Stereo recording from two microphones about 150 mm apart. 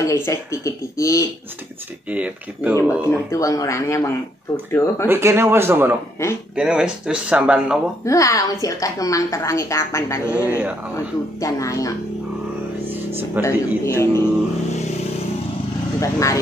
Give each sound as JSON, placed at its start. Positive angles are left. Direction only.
{"t": 0.0, "sound": "a woman's voice", "side_deg": 20}
{"t": 2.0, "sound": "speech", "side_deg": -10}
{"t": 2.8, "sound": "a woman's voice", "side_deg": 15}
{"t": 5.0, "sound": "speech", "side_deg": -15}
{"t": 8.0, "sound": "a woman's voice", "side_deg": 20}
{"t": 13.4, "sound": "a man's voice", "side_deg": 15}
{"t": 16.0, "sound": "a woman's voice", "side_deg": 20}